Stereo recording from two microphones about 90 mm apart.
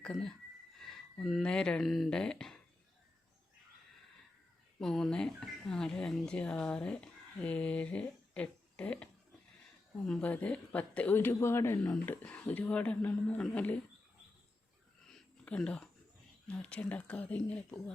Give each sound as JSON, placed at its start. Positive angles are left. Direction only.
{"t": 0.0, "sound": "speech", "side_deg": 10}
{"t": 4.8, "sound": "speech", "side_deg": 5}
{"t": 10.1, "sound": "a woman's voice", "side_deg": 15}
{"t": 15.4, "sound": "a woman's voice", "side_deg": 10}